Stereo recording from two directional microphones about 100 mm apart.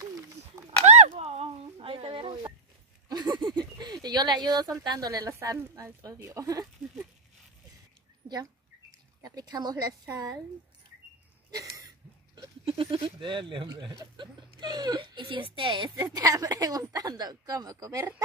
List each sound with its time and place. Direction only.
0.8 s a sound: 90° right; by 2.5 s 60° right (ahead or behind)
3.1 s speech: 45° right (ahead or behind)
9.2 s speech: 40° right (ahead or behind)
12.6 s a woman's voice: 60° right (ahead or behind); by 18.0 s 35° right (ahead or behind)